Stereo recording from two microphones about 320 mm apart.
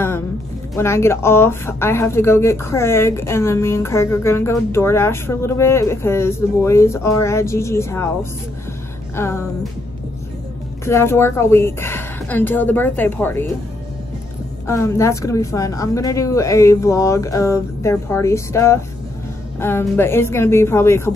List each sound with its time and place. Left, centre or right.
0.7 s speech: centre
10.9 s speech: centre
14.7 s speech: centre